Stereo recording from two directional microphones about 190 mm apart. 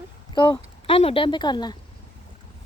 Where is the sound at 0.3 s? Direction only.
25° left (ahead or behind).